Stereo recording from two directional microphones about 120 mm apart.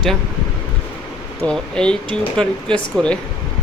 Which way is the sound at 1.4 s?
5° left (ahead or behind).